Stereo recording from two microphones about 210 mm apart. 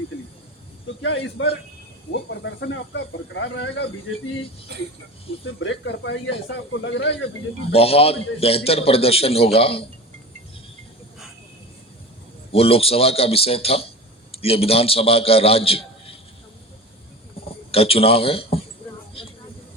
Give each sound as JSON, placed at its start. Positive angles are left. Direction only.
{"t": 1.0, "sound": "speech", "side_deg": 60}
{"t": 5.5, "sound": "speech", "side_deg": 60}
{"t": 7.7, "sound": "a man's voice", "side_deg": 25}
{"t": 12.5, "sound": "a man's voice", "side_deg": 25}
{"t": 17.7, "sound": "a man's voice", "side_deg": 25}